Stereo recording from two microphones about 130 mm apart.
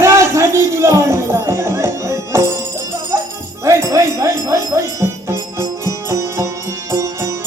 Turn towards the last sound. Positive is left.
turn(degrees=-25)  # may be behind; listen again after turning